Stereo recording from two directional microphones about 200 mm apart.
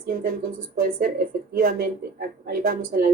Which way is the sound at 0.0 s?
45° right (ahead or behind).